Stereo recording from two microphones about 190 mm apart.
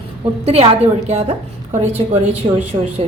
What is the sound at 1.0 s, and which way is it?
A woman's voice, 35° right (ahead or behind).